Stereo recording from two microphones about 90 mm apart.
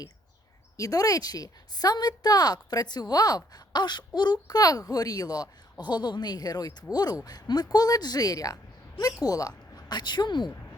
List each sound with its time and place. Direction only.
0.8 s a woman's voice: 40° left (ahead or behind)
9.7 s a woman's voice: 55° left (ahead or behind)